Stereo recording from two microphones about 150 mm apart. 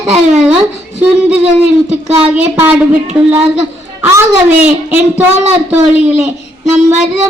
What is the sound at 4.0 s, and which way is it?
Speech, 15° right (ahead or behind).